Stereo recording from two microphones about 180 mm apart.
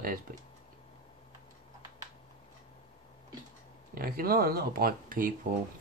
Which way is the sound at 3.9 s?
55° right (ahead or behind).